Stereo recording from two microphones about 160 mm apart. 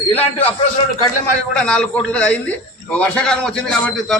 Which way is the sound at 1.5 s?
5° left (ahead or behind).